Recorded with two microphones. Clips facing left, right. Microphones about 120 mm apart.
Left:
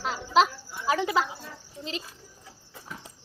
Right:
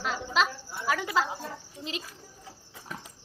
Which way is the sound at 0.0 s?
35° left (ahead or behind).